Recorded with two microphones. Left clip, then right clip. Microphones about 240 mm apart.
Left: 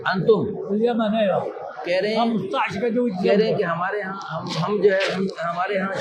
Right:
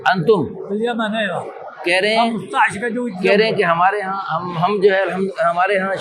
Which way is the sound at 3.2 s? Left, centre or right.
Right.